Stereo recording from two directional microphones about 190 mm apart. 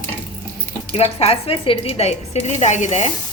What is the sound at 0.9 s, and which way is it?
A woman's voice, 30° left (ahead or behind).